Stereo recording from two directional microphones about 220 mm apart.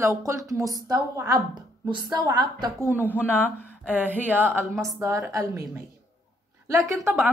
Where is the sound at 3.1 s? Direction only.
10° left (ahead or behind).